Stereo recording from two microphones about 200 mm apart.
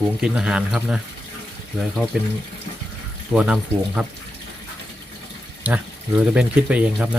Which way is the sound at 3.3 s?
5° right (ahead or behind).